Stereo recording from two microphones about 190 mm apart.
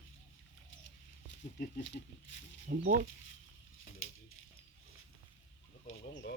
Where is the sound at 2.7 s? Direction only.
50° right (ahead or behind).